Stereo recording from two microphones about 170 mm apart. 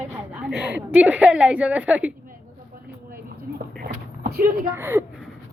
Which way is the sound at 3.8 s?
65° right (ahead or behind).